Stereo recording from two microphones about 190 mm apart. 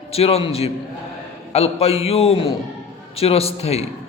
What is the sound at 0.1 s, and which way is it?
A man's voice, 30° left (ahead or behind).